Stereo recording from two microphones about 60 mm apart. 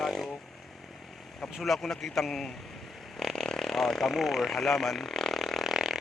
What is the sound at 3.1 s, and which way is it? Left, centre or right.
Vehicle, centre.